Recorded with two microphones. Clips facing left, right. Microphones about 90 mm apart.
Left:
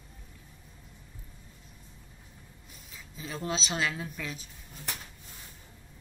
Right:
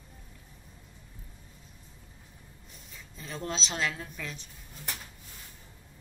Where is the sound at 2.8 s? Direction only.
Centre (ahead or behind).